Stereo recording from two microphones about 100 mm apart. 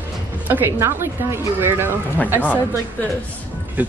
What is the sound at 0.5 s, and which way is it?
Speech, 20° right (ahead or behind).